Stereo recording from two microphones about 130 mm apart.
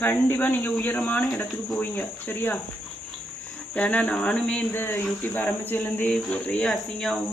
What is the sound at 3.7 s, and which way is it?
Speech, 10° left (ahead or behind).